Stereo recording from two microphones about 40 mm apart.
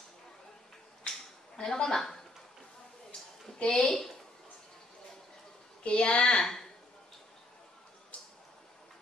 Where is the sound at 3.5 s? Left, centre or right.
Centre.